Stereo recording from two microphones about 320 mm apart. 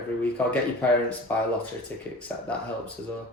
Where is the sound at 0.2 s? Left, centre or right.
Centre.